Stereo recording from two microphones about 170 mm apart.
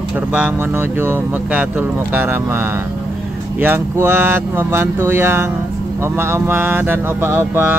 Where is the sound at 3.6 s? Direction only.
10° right (ahead or behind).